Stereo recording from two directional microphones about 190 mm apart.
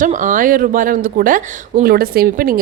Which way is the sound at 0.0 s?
40° right (ahead or behind).